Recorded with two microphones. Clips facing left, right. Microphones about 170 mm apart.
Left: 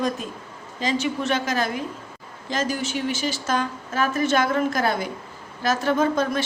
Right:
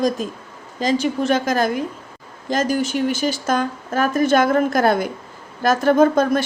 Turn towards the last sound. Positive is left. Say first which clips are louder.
# right 7 dB
turn(degrees=-50)  # may be behind; listen again after turning